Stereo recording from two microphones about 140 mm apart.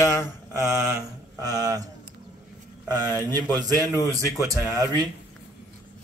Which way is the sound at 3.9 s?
20° left (ahead or behind).